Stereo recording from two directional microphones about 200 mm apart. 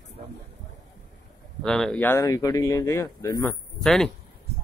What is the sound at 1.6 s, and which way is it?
Speech, 5° left (ahead or behind).